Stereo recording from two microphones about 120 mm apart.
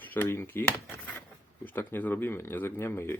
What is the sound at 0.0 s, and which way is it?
Speech, 15° left (ahead or behind).